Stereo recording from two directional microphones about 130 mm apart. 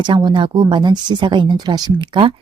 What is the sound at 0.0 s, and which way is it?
Speech, 35° right (ahead or behind).